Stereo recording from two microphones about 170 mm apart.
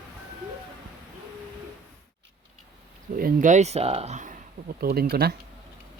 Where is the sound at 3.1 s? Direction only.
55° right (ahead or behind).